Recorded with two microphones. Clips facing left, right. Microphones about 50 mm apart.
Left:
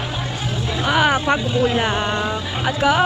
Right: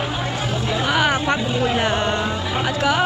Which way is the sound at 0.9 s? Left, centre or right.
Centre.